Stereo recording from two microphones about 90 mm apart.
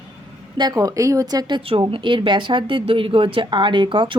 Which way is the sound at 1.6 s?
85° right.